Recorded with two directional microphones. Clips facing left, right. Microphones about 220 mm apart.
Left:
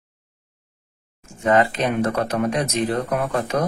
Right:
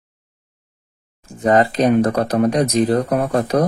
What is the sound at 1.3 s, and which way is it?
Speech, 35° right (ahead or behind).